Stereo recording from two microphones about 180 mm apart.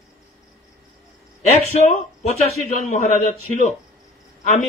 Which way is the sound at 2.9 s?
40° left (ahead or behind).